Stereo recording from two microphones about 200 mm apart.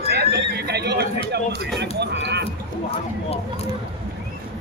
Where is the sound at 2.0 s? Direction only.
60° right (ahead or behind).